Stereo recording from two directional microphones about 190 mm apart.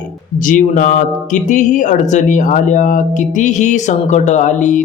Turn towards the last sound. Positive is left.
turn(degrees=40)  # may be behind; listen again after turning